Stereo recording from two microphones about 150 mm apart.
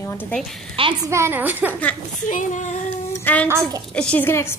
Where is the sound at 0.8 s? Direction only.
35° right (ahead or behind).